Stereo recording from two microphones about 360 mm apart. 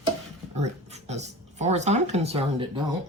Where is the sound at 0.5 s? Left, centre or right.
Centre.